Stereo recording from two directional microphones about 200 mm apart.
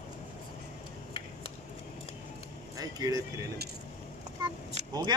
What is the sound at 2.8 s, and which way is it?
Speech, 20° right (ahead or behind).